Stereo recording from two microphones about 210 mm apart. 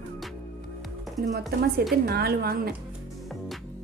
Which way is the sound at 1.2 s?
45° right (ahead or behind).